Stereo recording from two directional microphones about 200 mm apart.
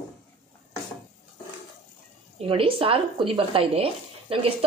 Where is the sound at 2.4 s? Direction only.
25° right (ahead or behind).